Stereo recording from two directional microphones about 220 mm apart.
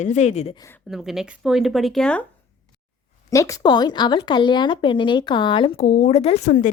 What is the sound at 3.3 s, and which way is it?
Speech, 15° left (ahead or behind).